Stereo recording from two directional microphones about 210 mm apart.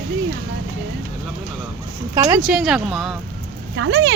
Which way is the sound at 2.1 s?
15° right (ahead or behind).